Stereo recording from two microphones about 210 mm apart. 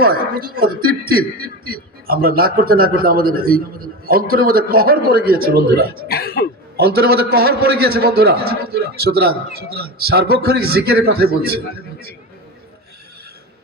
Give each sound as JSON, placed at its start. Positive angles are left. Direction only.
{"t": 0.0, "sound": "a man's voice", "side_deg": -45}
{"t": 6.1, "sound": "speech", "side_deg": 45}
{"t": 6.7, "sound": "a man's voice", "side_deg": -45}